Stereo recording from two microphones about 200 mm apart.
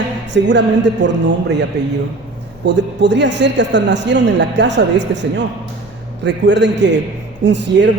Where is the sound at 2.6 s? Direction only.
60° right (ahead or behind).